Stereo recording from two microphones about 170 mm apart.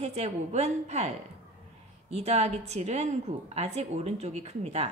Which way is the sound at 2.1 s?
40° right (ahead or behind).